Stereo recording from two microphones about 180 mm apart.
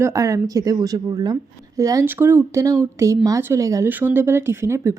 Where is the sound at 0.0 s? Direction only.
15° right (ahead or behind).